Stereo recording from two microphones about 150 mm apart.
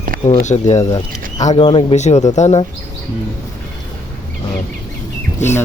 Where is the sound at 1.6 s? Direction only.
35° left (ahead or behind).